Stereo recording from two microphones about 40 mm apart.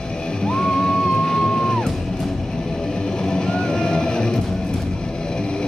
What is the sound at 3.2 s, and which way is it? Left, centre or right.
Music, centre.